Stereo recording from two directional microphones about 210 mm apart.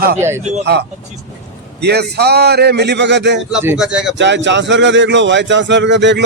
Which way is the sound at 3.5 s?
5° right (ahead or behind).